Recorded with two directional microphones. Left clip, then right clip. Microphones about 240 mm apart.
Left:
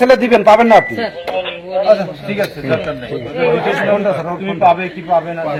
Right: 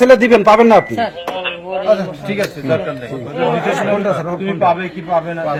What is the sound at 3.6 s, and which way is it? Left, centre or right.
A man's voice, right.